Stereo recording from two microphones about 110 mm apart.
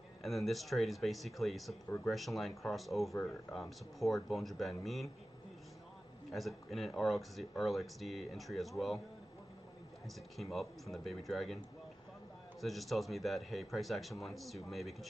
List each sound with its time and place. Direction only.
0.2 s speech: centre (ahead or behind)
6.3 s speech: centre (ahead or behind)
10.0 s speech: centre (ahead or behind)